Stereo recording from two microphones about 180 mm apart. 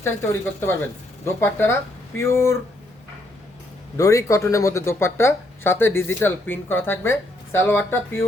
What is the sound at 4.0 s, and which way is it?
Speech, 15° left (ahead or behind).